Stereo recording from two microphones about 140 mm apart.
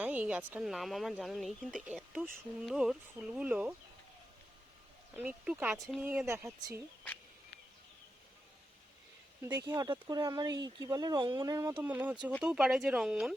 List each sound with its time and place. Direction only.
0.0 s speech: 10° right (ahead or behind)
0.6 s speech: centre (ahead or behind)
5.1 s speech: 10° right (ahead or behind)
9.6 s speech: 25° right (ahead or behind)
11.8 s speech: 10° right (ahead or behind)